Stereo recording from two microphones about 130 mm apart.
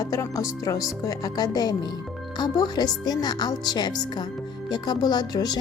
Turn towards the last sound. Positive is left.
turn(degrees=30)  # may be behind; listen again after turning